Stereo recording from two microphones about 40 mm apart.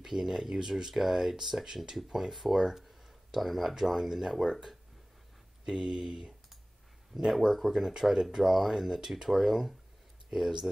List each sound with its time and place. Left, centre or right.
0.0 s speech: centre
7.2 s speech: centre
7.7 s speech: centre